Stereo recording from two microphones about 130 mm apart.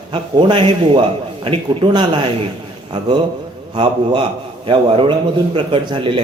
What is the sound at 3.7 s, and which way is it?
A man's voice, 40° right (ahead or behind).